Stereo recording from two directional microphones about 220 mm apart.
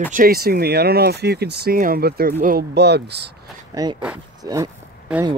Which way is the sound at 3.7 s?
15° right (ahead or behind).